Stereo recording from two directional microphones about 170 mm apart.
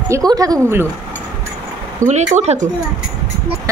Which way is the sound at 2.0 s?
45° right (ahead or behind).